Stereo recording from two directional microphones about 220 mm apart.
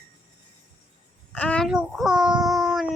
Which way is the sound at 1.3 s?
5° left (ahead or behind).